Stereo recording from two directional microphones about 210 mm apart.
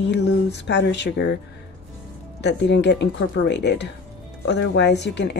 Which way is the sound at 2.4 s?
55° left (ahead or behind).